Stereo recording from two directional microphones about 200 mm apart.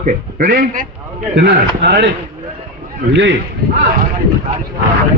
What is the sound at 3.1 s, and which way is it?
Speech, 60° right (ahead or behind).